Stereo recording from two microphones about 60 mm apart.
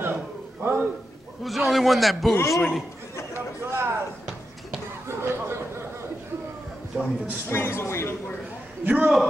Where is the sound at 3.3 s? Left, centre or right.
Right.